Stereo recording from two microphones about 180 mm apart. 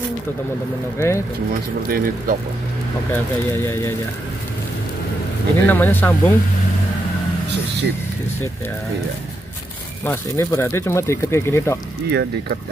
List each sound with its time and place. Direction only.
0.9 s speech: 15° left (ahead or behind)
1.9 s speech: 55° right (ahead or behind)
3.5 s speech: 15° left (ahead or behind)
5.7 s speech: 10° left (ahead or behind)
10.0 s speech: 15° left (ahead or behind)
12.1 s speech: 70° right (ahead or behind)